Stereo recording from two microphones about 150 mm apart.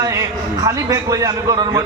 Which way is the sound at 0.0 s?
25° right (ahead or behind).